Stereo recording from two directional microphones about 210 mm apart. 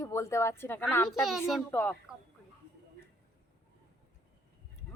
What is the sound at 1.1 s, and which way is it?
Speech, centre (ahead or behind).